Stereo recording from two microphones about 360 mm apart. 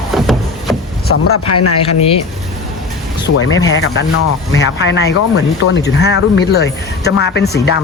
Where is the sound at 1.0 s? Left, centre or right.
Left.